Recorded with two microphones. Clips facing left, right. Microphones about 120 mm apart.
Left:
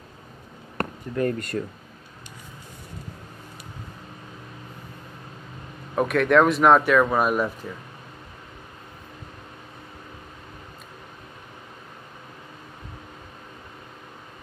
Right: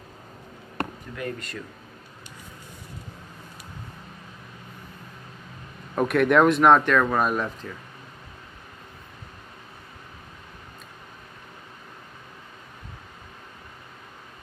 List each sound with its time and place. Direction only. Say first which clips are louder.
0.7 s speech: left 6 dB; 45° left (ahead or behind)
5.9 s speech: left 1 dB; centre (ahead or behind)